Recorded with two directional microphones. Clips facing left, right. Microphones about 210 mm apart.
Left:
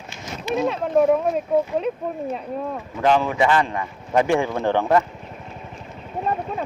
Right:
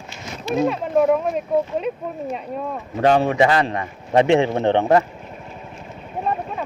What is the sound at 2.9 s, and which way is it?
Speech, 45° right (ahead or behind).